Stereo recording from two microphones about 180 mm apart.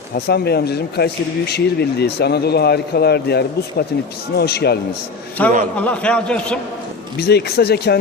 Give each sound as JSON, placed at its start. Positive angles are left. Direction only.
{"t": 0.3, "sound": "speech", "side_deg": 65}
{"t": 5.4, "sound": "speech", "side_deg": 10}
{"t": 7.2, "sound": "speech", "side_deg": 65}